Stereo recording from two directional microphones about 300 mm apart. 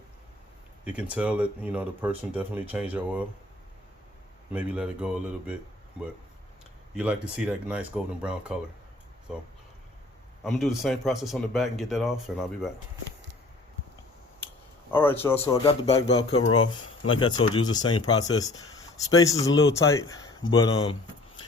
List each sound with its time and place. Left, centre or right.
0.9 s speech: centre
4.5 s speech: centre
6.9 s speech: centre
14.8 s speech: centre
16.3 s speech: left
17.1 s speech: centre